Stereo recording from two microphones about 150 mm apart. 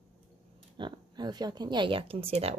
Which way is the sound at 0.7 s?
30° right (ahead or behind).